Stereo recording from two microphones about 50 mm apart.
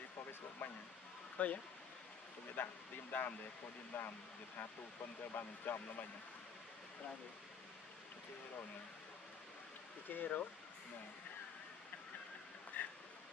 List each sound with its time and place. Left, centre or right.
0.6 s speech: left
5.3 s speech: left
10.0 s speech: left
12.7 s a sound: left